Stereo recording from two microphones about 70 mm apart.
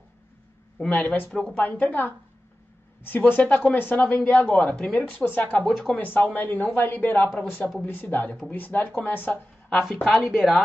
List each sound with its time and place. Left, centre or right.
0.8 s speech: left
5.7 s speech: centre
5.9 s a woman's voice: left
10.2 s speech: centre